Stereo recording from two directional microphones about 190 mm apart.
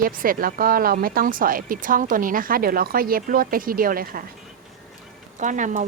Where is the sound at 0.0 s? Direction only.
50° right (ahead or behind).